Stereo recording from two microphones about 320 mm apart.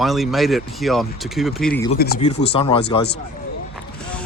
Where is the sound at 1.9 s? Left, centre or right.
Left.